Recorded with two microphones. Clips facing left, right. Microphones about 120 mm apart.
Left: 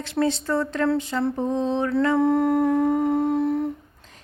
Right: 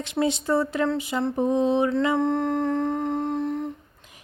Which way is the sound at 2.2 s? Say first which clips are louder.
Left 4 dB; 5° left (ahead or behind).